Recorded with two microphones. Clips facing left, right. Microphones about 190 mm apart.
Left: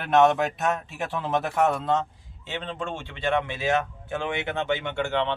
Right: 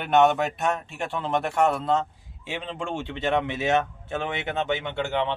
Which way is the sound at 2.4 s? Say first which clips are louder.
Right 1 dB; 10° right (ahead or behind).